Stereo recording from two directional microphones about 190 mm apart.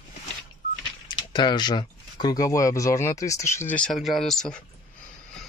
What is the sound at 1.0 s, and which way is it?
Speech, 25° left (ahead or behind).